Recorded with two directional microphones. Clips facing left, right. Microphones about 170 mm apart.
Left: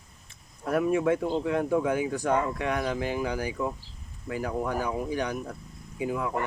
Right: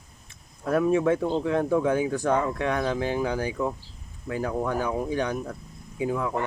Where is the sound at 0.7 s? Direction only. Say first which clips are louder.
Right 2 dB; 25° right (ahead or behind).